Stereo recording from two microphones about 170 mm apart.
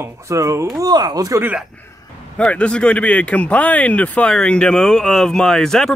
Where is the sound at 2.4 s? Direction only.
5° left (ahead or behind).